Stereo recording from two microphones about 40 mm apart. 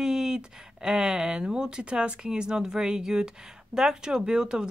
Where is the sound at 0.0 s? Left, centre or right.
Centre.